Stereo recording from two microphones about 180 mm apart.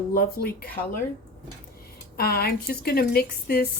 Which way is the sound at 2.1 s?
55° left (ahead or behind).